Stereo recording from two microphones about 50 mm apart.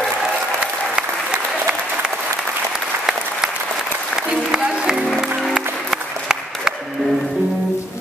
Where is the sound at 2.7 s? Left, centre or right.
Centre.